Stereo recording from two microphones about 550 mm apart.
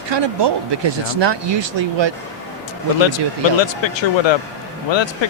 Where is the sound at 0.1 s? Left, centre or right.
Right.